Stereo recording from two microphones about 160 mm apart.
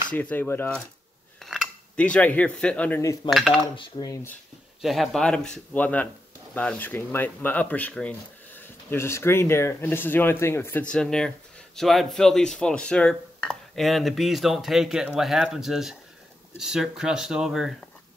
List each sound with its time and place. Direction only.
0.1 s speech: 10° left (ahead or behind)
3.7 s speech: 30° left (ahead or behind)
4.1 s speech: 15° left (ahead or behind)
4.8 s speech: centre (ahead or behind)